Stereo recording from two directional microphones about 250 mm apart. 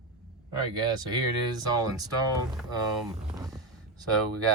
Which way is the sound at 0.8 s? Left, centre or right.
Centre.